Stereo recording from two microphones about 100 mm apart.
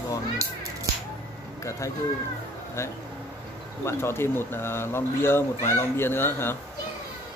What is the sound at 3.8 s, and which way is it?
Speech, 25° left (ahead or behind).